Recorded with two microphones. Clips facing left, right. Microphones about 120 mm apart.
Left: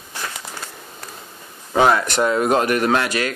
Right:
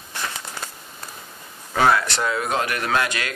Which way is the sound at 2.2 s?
40° left (ahead or behind).